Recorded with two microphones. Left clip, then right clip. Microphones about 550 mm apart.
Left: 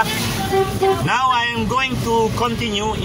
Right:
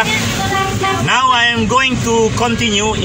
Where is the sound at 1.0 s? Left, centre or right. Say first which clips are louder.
Right 5 dB; left.